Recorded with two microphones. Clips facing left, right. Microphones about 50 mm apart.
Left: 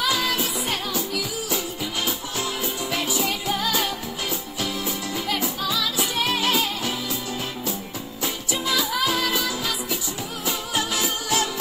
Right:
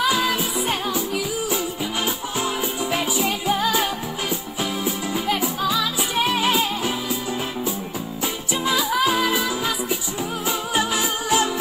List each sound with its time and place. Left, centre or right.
0.0 s music: centre
8.6 s music: centre